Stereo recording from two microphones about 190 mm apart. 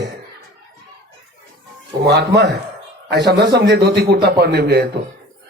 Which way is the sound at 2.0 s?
65° right (ahead or behind).